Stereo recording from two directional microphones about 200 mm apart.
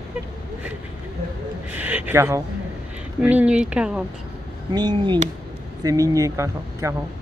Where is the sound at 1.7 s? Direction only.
10° right (ahead or behind).